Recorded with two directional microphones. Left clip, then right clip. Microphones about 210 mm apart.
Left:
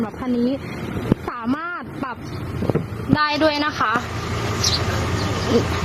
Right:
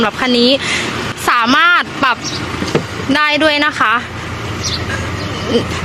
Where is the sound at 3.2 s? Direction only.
10° right (ahead or behind).